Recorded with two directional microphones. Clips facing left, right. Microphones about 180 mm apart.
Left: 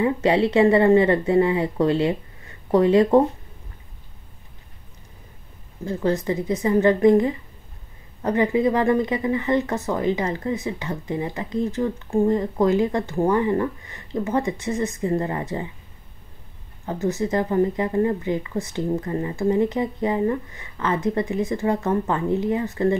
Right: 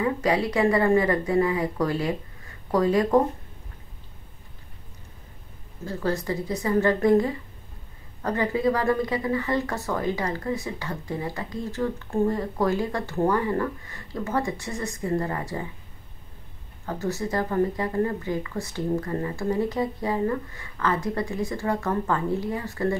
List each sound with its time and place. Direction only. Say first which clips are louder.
0.0 s speech: left 4 dB; 25° left (ahead or behind)
5.9 s speech: left 4 dB; 20° left (ahead or behind)
16.8 s speech: left 5 dB; 20° left (ahead or behind)